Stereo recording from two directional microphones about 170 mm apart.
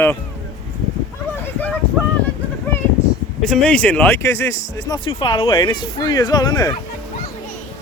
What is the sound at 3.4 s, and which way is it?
Speech, 5° left (ahead or behind).